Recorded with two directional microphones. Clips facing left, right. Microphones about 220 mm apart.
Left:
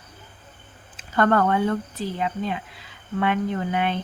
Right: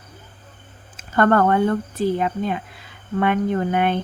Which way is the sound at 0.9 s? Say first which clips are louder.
Right 3 dB; 50° right (ahead or behind).